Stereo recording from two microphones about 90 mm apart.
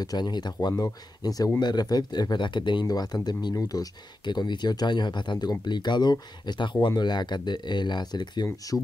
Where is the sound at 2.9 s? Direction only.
50° left (ahead or behind).